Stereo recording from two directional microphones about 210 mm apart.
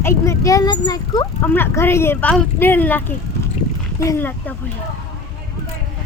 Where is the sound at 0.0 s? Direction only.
10° left (ahead or behind).